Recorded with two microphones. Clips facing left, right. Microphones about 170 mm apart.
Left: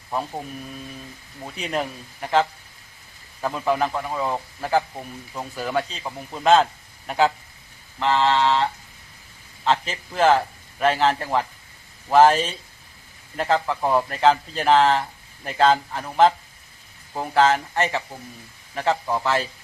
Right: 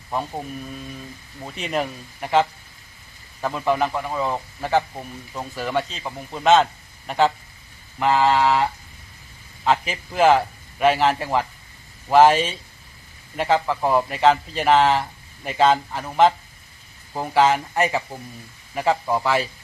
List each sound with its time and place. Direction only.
0.1 s speech: centre (ahead or behind)
7.9 s speech: 10° right (ahead or behind)